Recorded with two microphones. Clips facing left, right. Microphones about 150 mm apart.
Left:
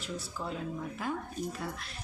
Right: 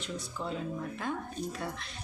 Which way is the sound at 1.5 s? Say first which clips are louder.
Right 1 dB; centre (ahead or behind).